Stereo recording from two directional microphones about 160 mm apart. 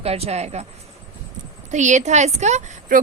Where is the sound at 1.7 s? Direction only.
50° right (ahead or behind).